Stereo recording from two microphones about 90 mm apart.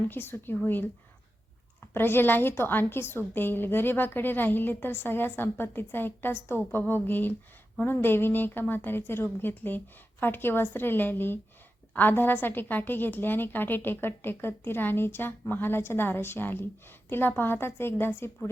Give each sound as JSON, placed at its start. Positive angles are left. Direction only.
{"t": 0.1, "sound": "a woman's voice", "side_deg": 25}
{"t": 1.9, "sound": "a woman's voice", "side_deg": 25}